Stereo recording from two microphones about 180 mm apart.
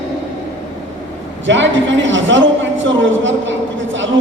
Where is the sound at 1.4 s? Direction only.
90° right.